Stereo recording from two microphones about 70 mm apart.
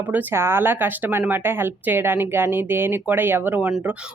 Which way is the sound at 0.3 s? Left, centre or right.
Right.